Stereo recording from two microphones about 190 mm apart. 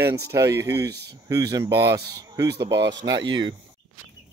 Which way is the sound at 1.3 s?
20° right (ahead or behind).